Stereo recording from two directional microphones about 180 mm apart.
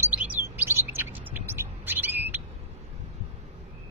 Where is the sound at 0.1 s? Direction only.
10° right (ahead or behind).